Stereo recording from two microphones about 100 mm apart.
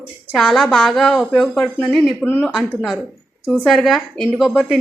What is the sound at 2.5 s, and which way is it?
A woman's voice, 5° right (ahead or behind).